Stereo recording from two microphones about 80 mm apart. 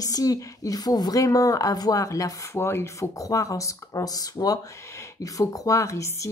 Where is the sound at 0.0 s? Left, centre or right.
Left.